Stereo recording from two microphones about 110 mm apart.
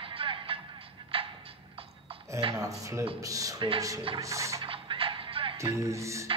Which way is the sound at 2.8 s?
30° right (ahead or behind).